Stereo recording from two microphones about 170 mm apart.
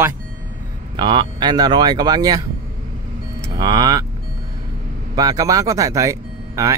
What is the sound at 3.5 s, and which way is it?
Speech, 25° right (ahead or behind).